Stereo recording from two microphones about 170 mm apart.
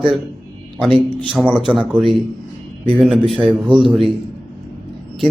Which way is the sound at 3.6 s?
30° right (ahead or behind).